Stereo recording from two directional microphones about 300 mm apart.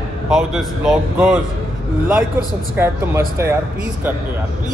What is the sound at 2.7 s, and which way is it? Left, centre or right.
Speech, centre.